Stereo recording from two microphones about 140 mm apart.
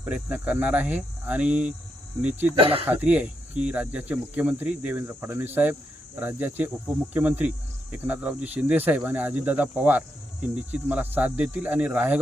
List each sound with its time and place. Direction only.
0.0 s speech: 10° right (ahead or behind)
2.6 s speech: 40° right (ahead or behind)
2.8 s speech: 10° right (ahead or behind)